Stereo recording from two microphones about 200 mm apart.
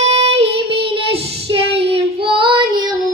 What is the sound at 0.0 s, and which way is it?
Child singing, 30° right (ahead or behind).